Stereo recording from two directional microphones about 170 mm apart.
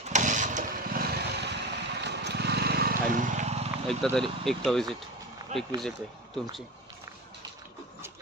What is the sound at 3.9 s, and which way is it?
Speech, 5° left (ahead or behind).